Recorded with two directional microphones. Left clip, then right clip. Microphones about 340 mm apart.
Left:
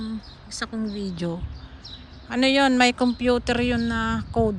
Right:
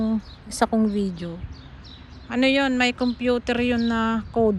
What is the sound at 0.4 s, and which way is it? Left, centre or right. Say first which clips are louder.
Speech: right 9 dB; centre.